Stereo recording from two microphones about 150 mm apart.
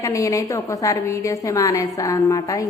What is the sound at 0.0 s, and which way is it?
A woman's voice, 20° left (ahead or behind).